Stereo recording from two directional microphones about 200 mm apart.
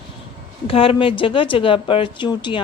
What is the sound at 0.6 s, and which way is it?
A woman's voice, 25° left (ahead or behind).